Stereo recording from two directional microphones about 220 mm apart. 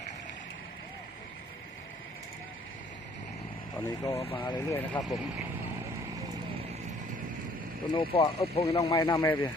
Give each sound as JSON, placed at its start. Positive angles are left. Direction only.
{"t": 3.8, "sound": "speech", "side_deg": 15}
{"t": 7.9, "sound": "speech", "side_deg": 25}
{"t": 8.7, "sound": "speech", "side_deg": 15}